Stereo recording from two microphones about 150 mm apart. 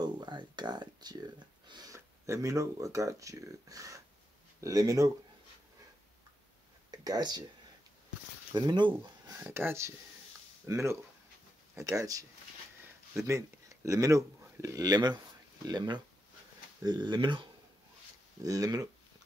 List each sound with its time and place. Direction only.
0.0 s speech: 30° right (ahead or behind)
7.1 s speech: 25° right (ahead or behind)
8.5 s speech: 30° right (ahead or behind)
9.4 s speech: 15° right (ahead or behind)